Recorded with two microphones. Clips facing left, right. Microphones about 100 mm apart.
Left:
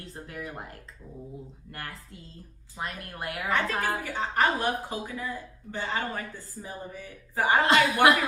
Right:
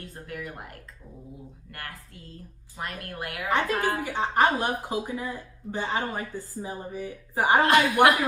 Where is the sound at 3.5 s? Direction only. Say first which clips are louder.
Right 3 dB; 20° right (ahead or behind).